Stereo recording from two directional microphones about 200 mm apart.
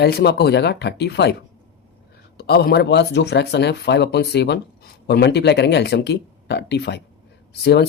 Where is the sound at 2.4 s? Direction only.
50° left (ahead or behind).